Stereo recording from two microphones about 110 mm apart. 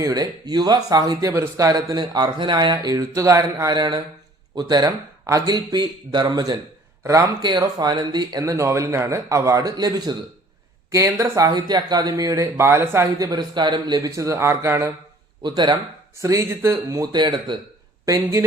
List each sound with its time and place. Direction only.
0.0 s speech: 35° right (ahead or behind)
2.7 s speech: 30° right (ahead or behind)
3.7 s a man's voice: 45° right (ahead or behind); by 13.1 s 20° right (ahead or behind)
13.1 s speech: 35° right (ahead or behind)
15.4 s speech: 45° right (ahead or behind)
16.2 s speech: 30° right (ahead or behind)
17.0 s speech: 40° right (ahead or behind)
18.0 s speech: 30° right (ahead or behind)